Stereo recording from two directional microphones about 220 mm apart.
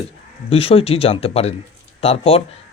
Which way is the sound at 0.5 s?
25° left (ahead or behind).